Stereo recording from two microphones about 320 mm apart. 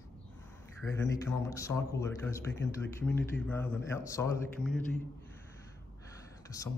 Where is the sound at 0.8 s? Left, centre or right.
Centre.